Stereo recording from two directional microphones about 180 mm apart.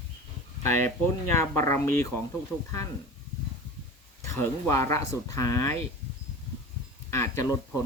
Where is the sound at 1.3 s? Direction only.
15° left (ahead or behind).